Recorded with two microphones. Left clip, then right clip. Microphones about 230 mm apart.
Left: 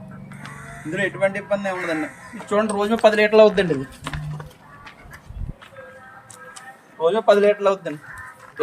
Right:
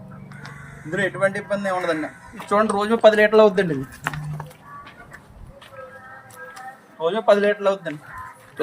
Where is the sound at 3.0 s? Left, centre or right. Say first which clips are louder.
Even; centre.